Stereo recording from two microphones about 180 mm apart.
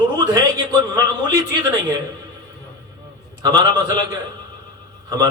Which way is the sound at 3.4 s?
20° right (ahead or behind).